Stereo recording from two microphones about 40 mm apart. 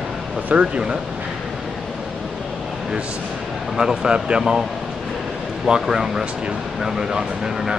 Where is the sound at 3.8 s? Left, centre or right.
Centre.